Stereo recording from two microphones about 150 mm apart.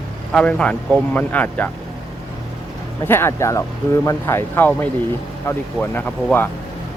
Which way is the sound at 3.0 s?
15° left (ahead or behind).